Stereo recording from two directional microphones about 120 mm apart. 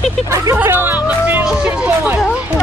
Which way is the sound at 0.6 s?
20° right (ahead or behind).